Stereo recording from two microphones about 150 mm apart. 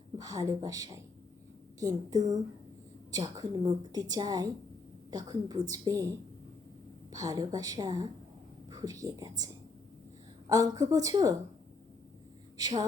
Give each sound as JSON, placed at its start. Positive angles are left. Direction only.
{"t": 0.2, "sound": "a woman's voice", "side_deg": -25}
{"t": 12.5, "sound": "speech", "side_deg": -25}